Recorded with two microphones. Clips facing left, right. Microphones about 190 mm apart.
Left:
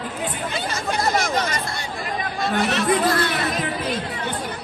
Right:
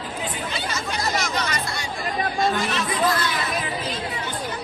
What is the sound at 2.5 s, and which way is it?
Chatter, 60° left (ahead or behind).